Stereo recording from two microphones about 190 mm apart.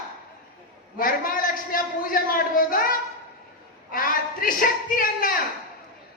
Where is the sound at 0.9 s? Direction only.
50° left (ahead or behind).